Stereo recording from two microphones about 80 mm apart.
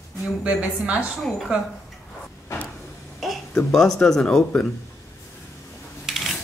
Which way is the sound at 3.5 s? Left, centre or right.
Centre.